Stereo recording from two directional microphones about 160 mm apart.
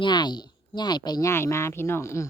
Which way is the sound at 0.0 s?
25° left (ahead or behind).